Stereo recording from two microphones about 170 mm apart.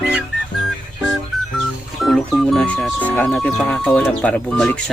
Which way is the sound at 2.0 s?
Centre (ahead or behind).